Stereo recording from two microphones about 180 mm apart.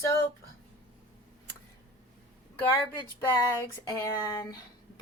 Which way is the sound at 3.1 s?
15° left (ahead or behind).